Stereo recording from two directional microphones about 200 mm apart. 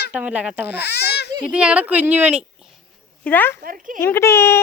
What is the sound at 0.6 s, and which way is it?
Baby cry, 55° left (ahead or behind).